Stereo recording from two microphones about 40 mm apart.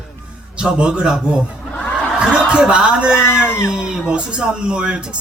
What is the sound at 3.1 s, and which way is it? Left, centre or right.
Speech, left.